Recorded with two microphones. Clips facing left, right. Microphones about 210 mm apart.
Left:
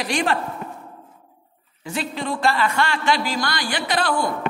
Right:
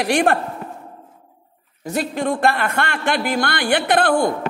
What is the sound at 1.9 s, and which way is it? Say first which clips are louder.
A man's voice: right 5 dB; 50° right (ahead or behind).